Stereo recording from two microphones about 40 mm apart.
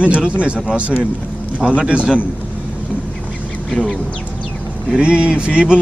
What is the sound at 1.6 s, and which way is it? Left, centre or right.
Speech, right.